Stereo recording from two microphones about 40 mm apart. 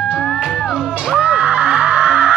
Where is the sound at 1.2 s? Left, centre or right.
Right.